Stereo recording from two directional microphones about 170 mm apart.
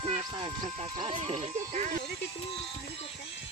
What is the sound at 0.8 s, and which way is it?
Speech, 35° right (ahead or behind).